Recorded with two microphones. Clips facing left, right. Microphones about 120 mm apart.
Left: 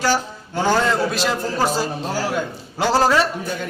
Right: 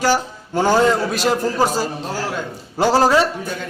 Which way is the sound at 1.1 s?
45° right (ahead or behind).